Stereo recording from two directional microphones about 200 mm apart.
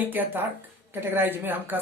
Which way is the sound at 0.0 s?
10° right (ahead or behind).